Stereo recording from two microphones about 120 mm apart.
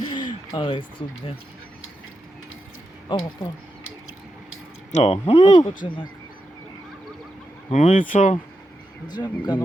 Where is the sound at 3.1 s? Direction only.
40° left (ahead or behind).